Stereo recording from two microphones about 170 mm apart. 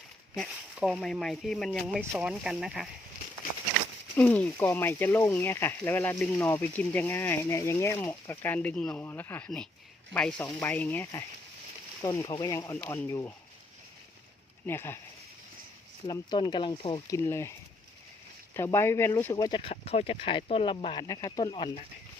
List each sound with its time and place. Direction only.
0.3 s speech: centre (ahead or behind)
2.0 s speech: 10° right (ahead or behind)
4.2 s speech: 10° left (ahead or behind)
14.7 s speech: 15° left (ahead or behind)
16.0 s speech: 25° left (ahead or behind)
17.2 s speech: 15° left (ahead or behind)
18.5 s speech: 15° left (ahead or behind)